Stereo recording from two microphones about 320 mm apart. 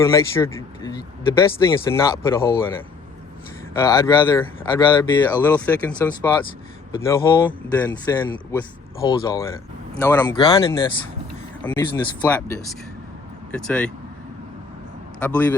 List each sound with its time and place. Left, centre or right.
0.0 s speech: centre
3.8 s speech: centre
15.2 s speech: centre